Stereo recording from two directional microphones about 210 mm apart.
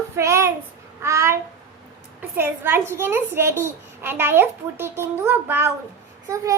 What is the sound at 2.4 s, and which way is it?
A child's voice, 10° right (ahead or behind).